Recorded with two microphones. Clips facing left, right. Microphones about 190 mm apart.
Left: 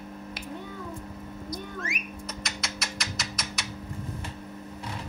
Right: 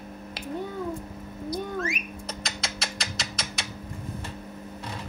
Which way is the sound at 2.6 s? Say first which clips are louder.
Right 1 dB; 30° right (ahead or behind).